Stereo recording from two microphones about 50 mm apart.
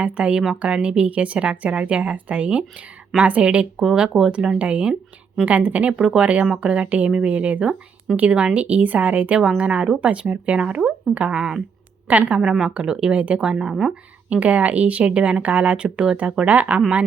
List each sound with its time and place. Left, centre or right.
0.0 s a woman's voice: right
12.0 s a woman's voice: right
12.4 s a woman's voice: centre; by 16.8 s right